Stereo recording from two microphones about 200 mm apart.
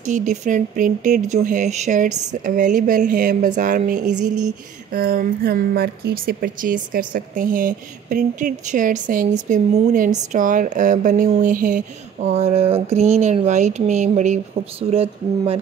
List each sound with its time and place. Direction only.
0.0 s speech: 40° right (ahead or behind)